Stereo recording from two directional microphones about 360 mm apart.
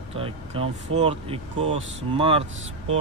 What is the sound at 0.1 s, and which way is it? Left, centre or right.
Speech, centre.